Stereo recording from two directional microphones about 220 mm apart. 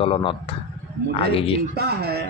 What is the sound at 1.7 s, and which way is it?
Speech, 45° right (ahead or behind).